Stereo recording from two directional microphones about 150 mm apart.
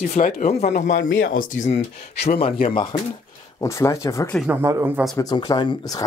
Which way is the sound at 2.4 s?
35° left (ahead or behind).